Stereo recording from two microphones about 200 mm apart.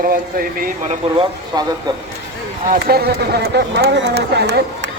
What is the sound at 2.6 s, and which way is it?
Speech, 50° right (ahead or behind).